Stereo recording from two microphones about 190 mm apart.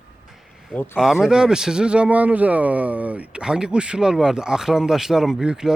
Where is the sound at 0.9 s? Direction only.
5° right (ahead or behind).